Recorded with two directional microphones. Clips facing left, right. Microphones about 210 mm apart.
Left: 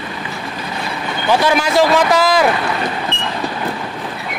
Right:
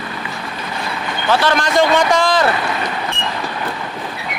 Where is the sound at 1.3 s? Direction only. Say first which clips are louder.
Left 1 dB; 10° left (ahead or behind).